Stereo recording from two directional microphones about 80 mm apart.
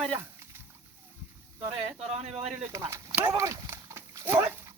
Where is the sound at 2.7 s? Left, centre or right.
Right.